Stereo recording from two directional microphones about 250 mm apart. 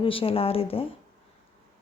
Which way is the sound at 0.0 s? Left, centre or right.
Left.